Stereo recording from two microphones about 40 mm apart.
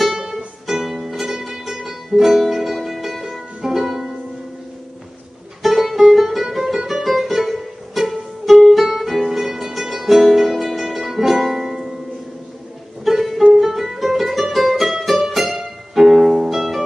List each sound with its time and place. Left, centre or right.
0.7 s music: centre
5.6 s music: centre
13.0 s music: centre